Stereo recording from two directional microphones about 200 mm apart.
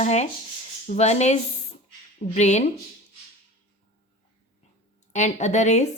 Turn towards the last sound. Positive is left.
turn(degrees=35)  # may be behind; listen again after turning